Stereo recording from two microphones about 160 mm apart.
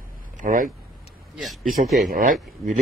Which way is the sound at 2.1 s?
60° right (ahead or behind).